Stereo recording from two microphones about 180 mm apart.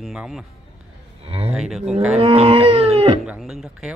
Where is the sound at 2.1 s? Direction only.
35° right (ahead or behind).